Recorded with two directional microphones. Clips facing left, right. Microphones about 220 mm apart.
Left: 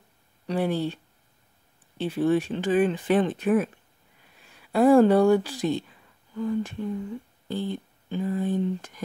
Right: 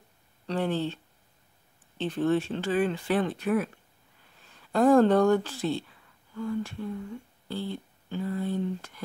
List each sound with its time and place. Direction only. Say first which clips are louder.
0.5 s speech: left 3 dB; 10° left (ahead or behind)
2.0 s speech: left 3 dB; 10° left (ahead or behind)